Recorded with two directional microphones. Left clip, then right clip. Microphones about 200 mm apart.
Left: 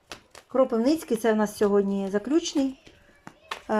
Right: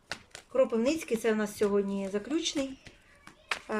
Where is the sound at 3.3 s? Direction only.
35° left (ahead or behind).